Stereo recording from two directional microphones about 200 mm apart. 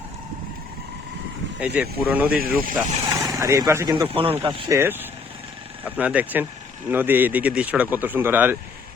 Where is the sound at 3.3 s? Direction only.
15° right (ahead or behind).